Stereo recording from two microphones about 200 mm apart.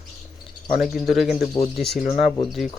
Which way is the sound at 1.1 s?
Centre (ahead or behind).